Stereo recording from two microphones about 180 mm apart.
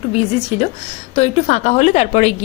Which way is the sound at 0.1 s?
35° left (ahead or behind).